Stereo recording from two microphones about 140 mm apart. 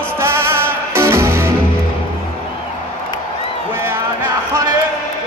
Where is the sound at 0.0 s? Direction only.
20° right (ahead or behind).